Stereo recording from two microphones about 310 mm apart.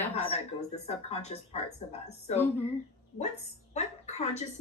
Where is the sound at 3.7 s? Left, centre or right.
Left.